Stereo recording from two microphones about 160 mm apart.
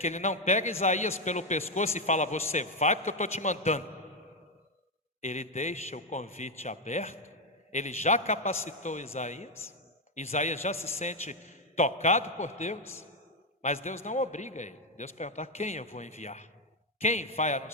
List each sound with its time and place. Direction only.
0.0 s a man's voice: 45° left (ahead or behind)
5.2 s a man's voice: 45° left (ahead or behind)
13.8 s a man's voice: 45° left (ahead or behind)